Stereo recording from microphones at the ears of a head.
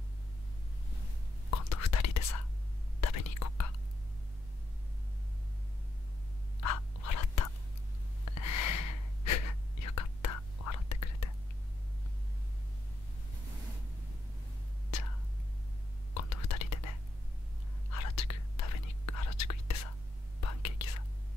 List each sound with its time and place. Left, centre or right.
1.5 s whispering: left
6.6 s whispering: left
16.1 s whispering: left